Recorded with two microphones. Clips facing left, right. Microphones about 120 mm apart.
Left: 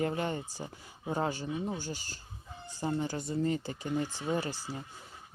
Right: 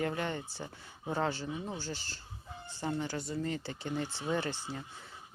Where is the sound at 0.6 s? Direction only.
15° left (ahead or behind).